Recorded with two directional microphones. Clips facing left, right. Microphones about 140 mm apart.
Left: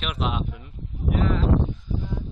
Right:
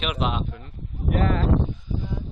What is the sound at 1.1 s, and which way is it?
Speech, 50° right (ahead or behind).